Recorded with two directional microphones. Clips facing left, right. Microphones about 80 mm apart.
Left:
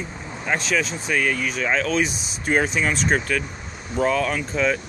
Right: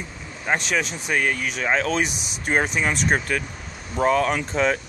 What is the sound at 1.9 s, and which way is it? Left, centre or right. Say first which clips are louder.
Speech: left 1 dB; right.